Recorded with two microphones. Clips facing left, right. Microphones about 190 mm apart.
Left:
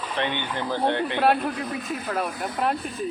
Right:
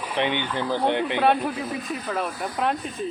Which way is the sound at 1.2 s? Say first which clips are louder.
Left 1 dB; centre (ahead or behind).